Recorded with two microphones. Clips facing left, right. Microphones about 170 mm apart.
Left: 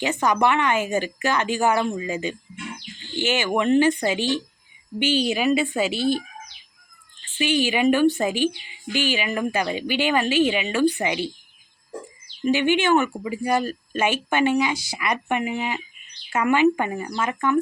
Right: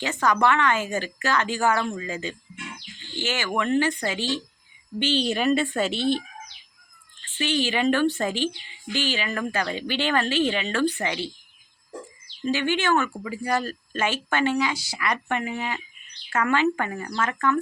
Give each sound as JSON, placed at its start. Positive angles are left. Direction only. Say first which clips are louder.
{"t": 0.0, "sound": "a woman's voice", "louder": "left 2 dB", "side_deg": 15}
{"t": 7.3, "sound": "a woman's voice", "louder": "left 3 dB", "side_deg": 10}
{"t": 12.5, "sound": "a woman's voice", "louder": "left 4 dB", "side_deg": 15}